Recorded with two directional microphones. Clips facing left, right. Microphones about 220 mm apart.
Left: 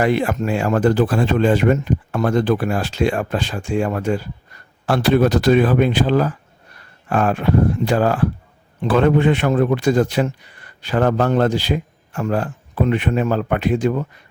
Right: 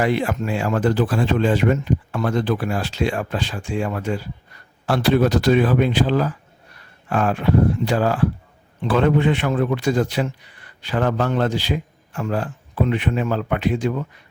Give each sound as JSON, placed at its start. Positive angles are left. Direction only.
{"t": 0.0, "sound": "a man's voice", "side_deg": 50}